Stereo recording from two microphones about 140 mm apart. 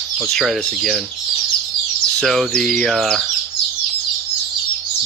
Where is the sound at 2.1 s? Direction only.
Centre (ahead or behind).